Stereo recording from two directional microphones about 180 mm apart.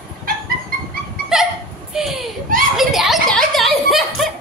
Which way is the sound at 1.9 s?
5° right (ahead or behind).